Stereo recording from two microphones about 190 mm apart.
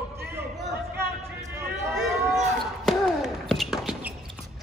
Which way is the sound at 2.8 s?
Centre (ahead or behind).